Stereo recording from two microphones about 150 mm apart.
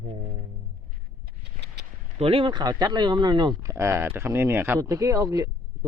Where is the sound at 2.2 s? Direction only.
40° right (ahead or behind).